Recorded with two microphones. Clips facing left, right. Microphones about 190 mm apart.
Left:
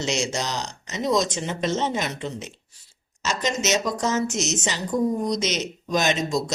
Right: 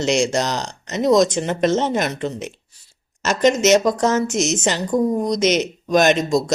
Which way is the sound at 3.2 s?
55° right (ahead or behind).